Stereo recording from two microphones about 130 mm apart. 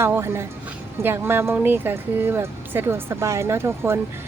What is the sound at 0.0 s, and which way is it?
Speech, 20° right (ahead or behind).